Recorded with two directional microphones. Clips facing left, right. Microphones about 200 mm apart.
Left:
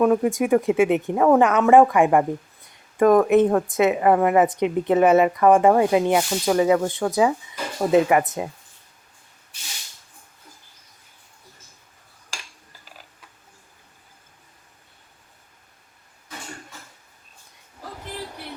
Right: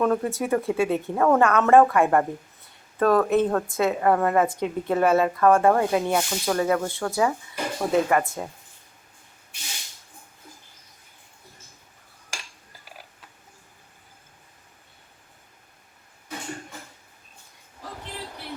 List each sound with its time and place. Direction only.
0.0 s a woman's voice: 15° left (ahead or behind)